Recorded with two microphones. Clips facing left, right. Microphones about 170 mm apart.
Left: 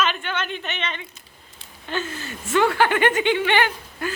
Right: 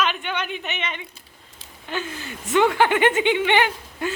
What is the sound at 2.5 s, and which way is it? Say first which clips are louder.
Speech: right 1 dB; 20° right (ahead or behind).